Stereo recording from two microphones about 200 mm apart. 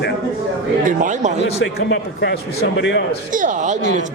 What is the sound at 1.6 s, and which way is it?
A man's voice, 60° left (ahead or behind).